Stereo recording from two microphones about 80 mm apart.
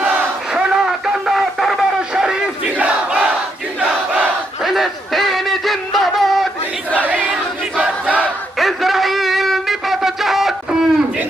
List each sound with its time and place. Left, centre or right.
0.5 s a sound: centre
3.8 s battle cry: right
4.6 s music: centre
7.8 s battle cry: centre
8.5 s wind instrument: centre